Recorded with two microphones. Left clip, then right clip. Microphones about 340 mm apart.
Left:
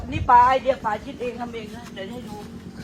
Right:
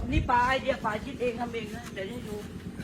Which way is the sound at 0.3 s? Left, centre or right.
Left.